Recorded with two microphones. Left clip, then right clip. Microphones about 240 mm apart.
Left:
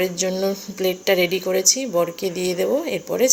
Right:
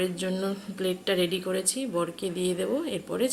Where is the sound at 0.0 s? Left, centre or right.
Centre.